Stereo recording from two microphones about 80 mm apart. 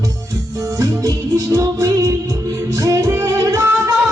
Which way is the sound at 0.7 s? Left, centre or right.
Right.